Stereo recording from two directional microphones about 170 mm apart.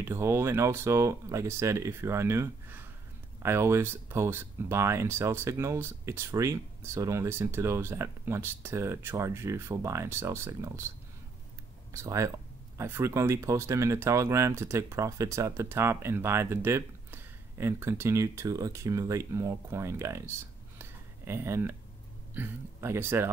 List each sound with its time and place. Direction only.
0.0 s speech: 15° right (ahead or behind)
11.9 s speech: 15° right (ahead or behind)